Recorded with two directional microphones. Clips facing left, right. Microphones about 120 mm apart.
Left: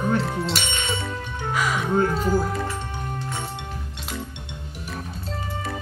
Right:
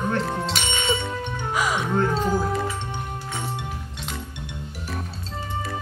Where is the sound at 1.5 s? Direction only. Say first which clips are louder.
Even; 15° right (ahead or behind).